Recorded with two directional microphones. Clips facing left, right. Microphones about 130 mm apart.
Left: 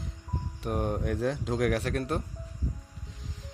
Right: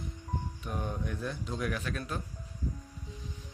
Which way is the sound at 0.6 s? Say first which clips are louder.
Left 9 dB; 60° left (ahead or behind).